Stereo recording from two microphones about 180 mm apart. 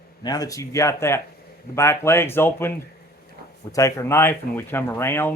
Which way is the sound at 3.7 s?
15° left (ahead or behind).